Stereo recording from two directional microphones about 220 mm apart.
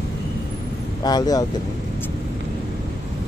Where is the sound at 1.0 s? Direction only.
15° left (ahead or behind).